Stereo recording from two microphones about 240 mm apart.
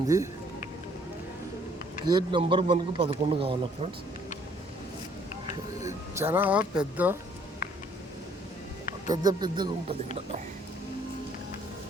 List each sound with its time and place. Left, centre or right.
0.1 s speech: centre
2.0 s a man's voice: centre
5.8 s speech: centre
9.0 s speech: centre